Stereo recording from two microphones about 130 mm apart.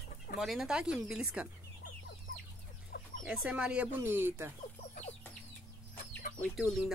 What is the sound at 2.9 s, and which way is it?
Chicken, 90° left.